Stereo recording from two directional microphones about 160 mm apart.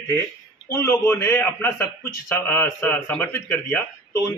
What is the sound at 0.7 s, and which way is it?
A man's voice, 15° left (ahead or behind).